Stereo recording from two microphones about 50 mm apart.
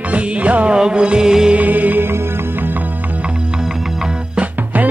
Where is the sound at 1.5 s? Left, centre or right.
Right.